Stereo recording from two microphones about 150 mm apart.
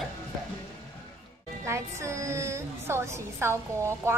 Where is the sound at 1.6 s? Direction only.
20° right (ahead or behind).